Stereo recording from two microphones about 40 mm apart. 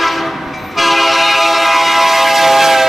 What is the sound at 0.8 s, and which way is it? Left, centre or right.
Train, centre.